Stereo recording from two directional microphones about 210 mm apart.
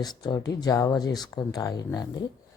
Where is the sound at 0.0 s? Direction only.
20° left (ahead or behind).